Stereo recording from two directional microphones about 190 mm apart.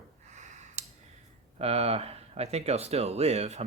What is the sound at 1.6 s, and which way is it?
Speech, 30° right (ahead or behind).